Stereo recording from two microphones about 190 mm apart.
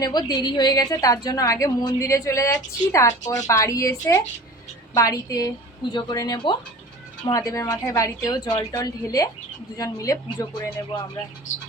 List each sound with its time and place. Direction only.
0.0 s a woman's voice: 20° left (ahead or behind)